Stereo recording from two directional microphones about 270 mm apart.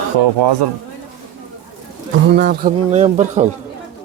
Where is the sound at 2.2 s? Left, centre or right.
Right.